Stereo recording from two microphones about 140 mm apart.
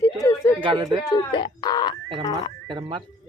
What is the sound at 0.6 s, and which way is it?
Speech, 35° right (ahead or behind).